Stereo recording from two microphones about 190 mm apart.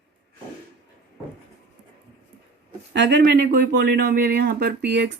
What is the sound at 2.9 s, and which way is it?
Speech, 65° right (ahead or behind).